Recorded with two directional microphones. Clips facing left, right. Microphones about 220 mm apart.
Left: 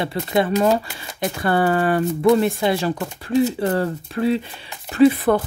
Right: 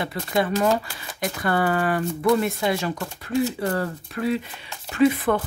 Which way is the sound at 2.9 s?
20° left (ahead or behind).